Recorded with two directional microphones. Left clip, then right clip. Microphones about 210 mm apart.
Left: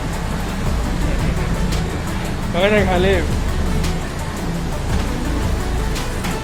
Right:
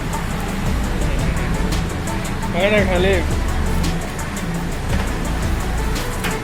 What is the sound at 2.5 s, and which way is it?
Speech, 5° left (ahead or behind).